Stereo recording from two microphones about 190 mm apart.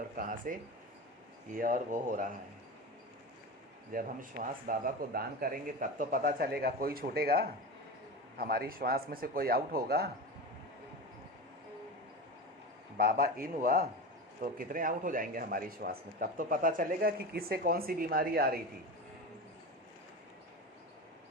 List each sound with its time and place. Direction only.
0.2 s speech: 45° right (ahead or behind)
1.5 s speech: 45° right (ahead or behind)
3.9 s speech: 45° right (ahead or behind)
13.0 s speech: 50° right (ahead or behind)